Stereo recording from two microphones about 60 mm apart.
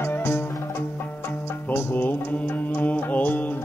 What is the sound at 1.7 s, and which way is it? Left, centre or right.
Music, left.